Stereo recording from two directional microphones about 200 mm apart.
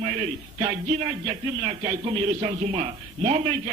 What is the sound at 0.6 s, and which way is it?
A man's voice, 30° right (ahead or behind).